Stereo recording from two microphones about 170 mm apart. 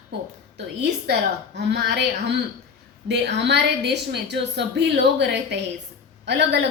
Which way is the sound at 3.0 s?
90° right.